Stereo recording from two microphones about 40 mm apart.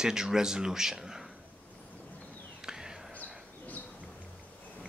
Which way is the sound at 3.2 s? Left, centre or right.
Left.